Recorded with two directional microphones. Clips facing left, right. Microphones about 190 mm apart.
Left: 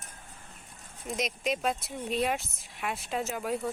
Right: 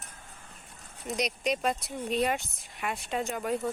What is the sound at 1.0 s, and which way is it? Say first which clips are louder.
Speech: right 1 dB; centre (ahead or behind).